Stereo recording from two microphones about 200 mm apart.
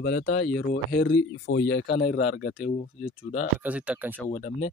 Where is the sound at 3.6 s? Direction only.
5° right (ahead or behind).